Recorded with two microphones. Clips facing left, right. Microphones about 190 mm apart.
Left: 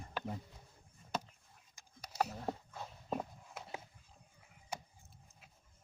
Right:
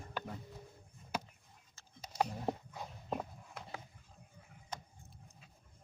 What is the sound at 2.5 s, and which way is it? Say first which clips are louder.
Walk: right 3 dB; 15° right (ahead or behind).